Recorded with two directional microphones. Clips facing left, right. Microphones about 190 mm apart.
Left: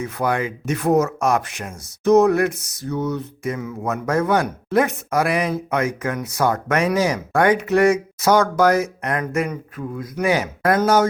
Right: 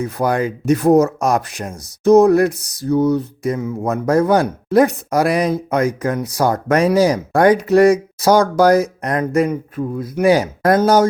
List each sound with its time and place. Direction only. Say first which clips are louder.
0.0 s speech: right 4 dB; 35° right (ahead or behind)